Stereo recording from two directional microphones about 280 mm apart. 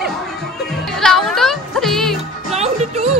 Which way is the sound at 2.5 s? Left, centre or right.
Right.